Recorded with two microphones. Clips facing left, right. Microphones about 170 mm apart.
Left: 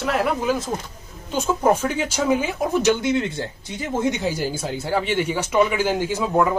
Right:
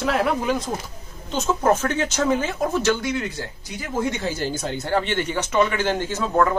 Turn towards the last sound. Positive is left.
turn(degrees=10)  # may be behind; listen again after turning